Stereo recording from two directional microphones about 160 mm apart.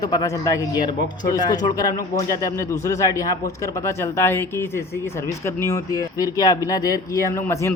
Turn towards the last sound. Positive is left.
turn(degrees=20)  # may be behind; listen again after turning